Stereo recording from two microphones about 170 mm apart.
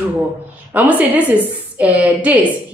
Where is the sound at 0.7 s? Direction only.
10° right (ahead or behind).